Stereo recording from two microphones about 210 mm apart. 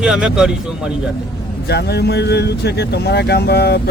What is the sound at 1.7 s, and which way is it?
Speech, 50° left (ahead or behind).